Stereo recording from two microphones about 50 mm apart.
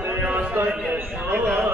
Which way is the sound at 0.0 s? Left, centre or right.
Right.